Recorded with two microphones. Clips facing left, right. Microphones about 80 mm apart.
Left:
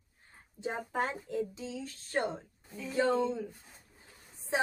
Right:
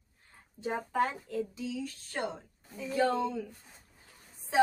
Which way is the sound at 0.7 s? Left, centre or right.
Centre.